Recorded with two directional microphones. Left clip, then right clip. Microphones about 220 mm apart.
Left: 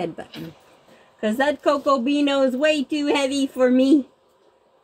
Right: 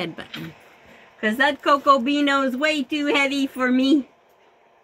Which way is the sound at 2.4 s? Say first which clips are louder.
Left 3 dB; 10° right (ahead or behind).